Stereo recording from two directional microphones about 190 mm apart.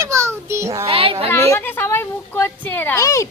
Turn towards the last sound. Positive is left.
turn(degrees=15)  # may be behind; listen again after turning